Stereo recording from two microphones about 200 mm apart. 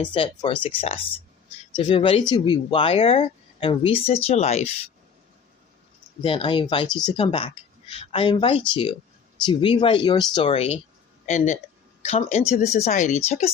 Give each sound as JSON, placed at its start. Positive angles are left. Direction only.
{"t": 0.1, "sound": "speech", "side_deg": 25}
{"t": 6.2, "sound": "speech", "side_deg": 25}